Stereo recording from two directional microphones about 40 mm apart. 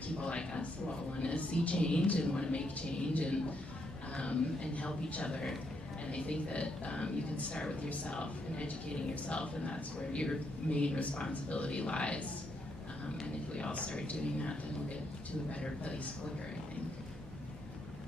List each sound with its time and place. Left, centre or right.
0.2 s a sound: left
1.3 s a man's voice: left
13.6 s a man's voice: left